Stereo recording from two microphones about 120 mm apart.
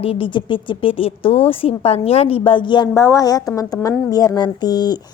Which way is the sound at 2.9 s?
25° left (ahead or behind).